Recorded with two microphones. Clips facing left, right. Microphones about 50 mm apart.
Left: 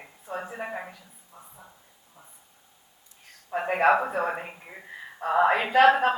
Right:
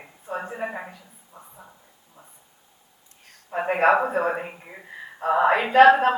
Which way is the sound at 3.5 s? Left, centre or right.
Right.